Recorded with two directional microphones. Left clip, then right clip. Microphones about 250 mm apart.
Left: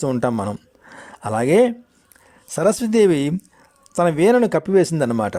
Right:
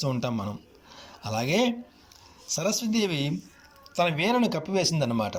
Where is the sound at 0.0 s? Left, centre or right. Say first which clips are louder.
Left 9 dB; left.